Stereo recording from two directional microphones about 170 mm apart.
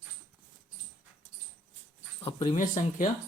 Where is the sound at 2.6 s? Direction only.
50° left (ahead or behind).